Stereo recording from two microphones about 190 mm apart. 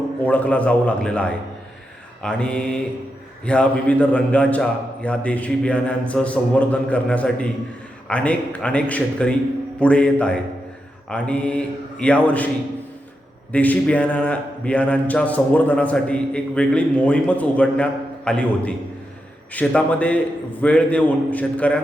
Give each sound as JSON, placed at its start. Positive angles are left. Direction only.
{"t": 0.2, "sound": "a man's voice", "side_deg": 10}
{"t": 13.5, "sound": "a man's voice", "side_deg": 10}